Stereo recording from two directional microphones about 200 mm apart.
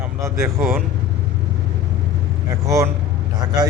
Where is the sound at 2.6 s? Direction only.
15° right (ahead or behind).